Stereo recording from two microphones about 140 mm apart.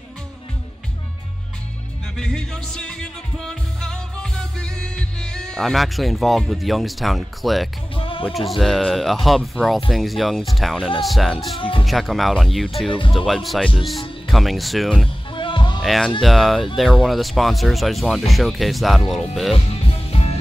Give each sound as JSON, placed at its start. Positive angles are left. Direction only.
{"t": 2.1, "sound": "music", "side_deg": 5}
{"t": 7.9, "sound": "music", "side_deg": 40}
{"t": 8.3, "sound": "speech", "side_deg": 0}
{"t": 15.3, "sound": "music", "side_deg": 35}
{"t": 15.8, "sound": "speech", "side_deg": 0}
{"t": 20.1, "sound": "music", "side_deg": 45}